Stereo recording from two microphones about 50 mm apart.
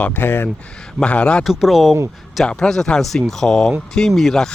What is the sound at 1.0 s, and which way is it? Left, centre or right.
Speech, left.